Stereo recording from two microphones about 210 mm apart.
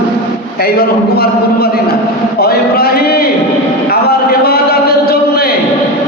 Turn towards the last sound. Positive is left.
turn(degrees=50)  # may be behind; listen again after turning